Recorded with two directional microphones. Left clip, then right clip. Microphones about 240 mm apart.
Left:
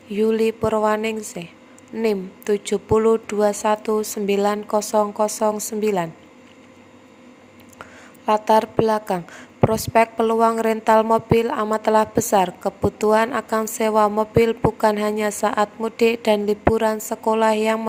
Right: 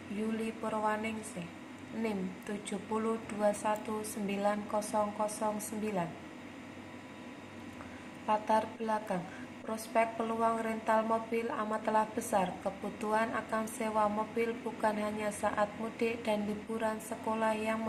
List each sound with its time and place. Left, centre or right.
0.3 s a woman's voice: left
8.3 s a woman's voice: left